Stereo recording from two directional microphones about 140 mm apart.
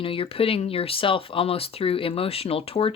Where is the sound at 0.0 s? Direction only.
40° left (ahead or behind).